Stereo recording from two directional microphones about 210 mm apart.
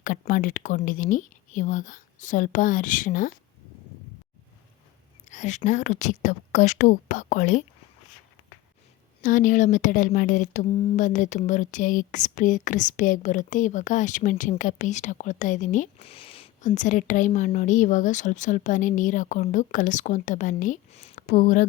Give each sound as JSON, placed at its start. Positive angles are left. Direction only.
{"t": 0.0, "sound": "a woman's voice", "side_deg": 40}
{"t": 5.3, "sound": "a woman's voice", "side_deg": 35}
{"t": 9.2, "sound": "a woman's voice", "side_deg": 35}